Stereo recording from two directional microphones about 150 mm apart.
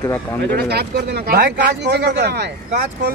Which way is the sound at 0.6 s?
90° right.